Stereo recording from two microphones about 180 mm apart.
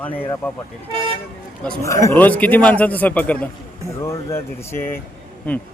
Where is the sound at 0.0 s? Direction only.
10° left (ahead or behind).